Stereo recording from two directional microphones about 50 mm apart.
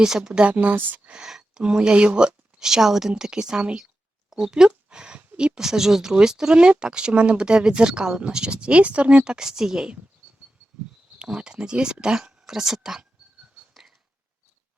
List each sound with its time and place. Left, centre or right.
0.0 s speech: centre
0.4 s a woman's voice: right
1.1 s a sound: centre
1.6 s speech: centre
4.3 s a sound: centre
5.5 s speech: centre
11.2 s speech: centre